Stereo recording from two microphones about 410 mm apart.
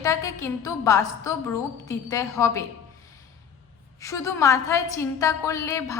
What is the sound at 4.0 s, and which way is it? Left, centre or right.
A woman's voice, centre.